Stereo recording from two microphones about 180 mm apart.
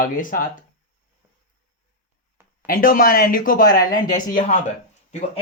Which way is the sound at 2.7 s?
50° left (ahead or behind).